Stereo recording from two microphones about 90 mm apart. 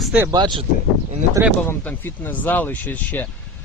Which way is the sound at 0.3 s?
55° right (ahead or behind).